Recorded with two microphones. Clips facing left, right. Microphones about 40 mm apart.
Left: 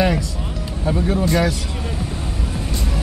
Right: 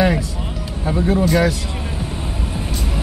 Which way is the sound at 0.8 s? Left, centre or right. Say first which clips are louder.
Right 2 dB; centre.